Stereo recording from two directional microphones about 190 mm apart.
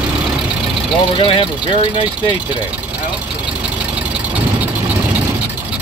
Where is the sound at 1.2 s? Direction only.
25° left (ahead or behind).